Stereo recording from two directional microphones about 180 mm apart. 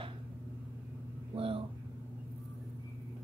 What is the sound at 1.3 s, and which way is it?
Vehicle, 30° right (ahead or behind).